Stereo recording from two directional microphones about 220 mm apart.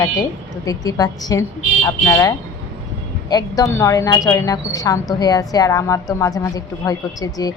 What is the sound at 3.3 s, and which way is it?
A woman's voice, 15° left (ahead or behind).